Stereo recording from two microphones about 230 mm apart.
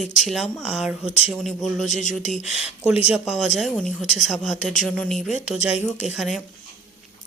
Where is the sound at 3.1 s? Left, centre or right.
Centre.